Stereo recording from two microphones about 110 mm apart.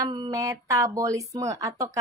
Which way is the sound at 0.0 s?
40° right (ahead or behind).